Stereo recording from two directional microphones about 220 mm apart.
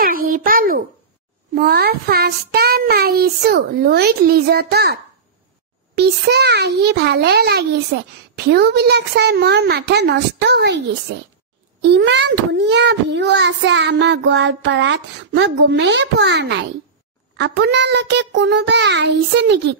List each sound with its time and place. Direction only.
0.0 s a sound: 40° right (ahead or behind)
1.5 s a child's voice: 45° right (ahead or behind)
5.9 s a child's voice: 50° right (ahead or behind)